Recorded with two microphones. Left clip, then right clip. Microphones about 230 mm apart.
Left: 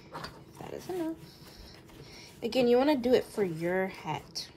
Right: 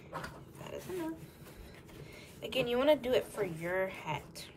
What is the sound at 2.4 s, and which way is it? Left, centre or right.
A woman's voice, left.